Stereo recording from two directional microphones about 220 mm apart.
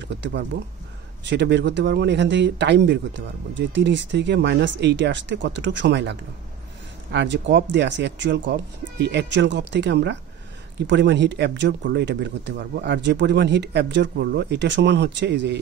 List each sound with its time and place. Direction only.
0.0 s speech: 50° right (ahead or behind)